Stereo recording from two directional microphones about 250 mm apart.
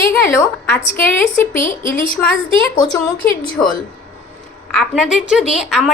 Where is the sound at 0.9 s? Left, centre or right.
Centre.